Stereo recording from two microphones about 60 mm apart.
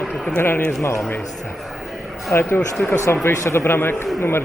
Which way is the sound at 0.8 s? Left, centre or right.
Left.